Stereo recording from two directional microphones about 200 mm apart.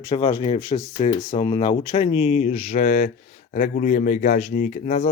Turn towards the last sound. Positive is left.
turn(degrees=40)  # may be behind; listen again after turning